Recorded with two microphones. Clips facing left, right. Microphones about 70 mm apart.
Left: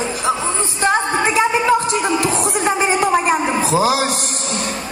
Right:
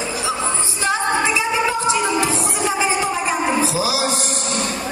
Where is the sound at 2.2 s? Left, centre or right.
Left.